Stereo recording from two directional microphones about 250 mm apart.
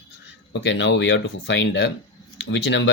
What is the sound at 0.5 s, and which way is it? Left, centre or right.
Speech, left.